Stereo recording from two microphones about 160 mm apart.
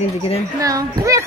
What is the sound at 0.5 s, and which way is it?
Speech, 20° right (ahead or behind).